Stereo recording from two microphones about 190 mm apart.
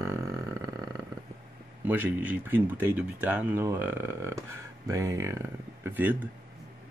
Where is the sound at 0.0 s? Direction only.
15° right (ahead or behind).